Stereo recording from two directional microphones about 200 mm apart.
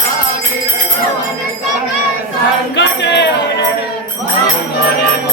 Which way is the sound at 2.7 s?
60° left (ahead or behind).